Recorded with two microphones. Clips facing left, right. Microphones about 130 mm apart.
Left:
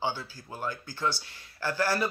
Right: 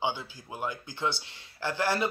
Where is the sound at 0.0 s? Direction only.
20° right (ahead or behind).